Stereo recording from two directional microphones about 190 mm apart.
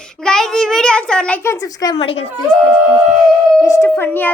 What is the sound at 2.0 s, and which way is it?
Speech, 30° left (ahead or behind).